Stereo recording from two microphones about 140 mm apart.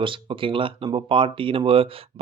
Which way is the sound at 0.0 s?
40° right (ahead or behind).